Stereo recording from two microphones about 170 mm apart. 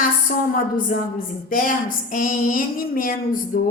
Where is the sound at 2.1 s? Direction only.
55° left (ahead or behind).